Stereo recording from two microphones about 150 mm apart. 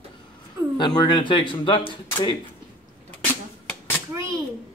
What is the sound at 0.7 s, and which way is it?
A man's voice, 30° left (ahead or behind).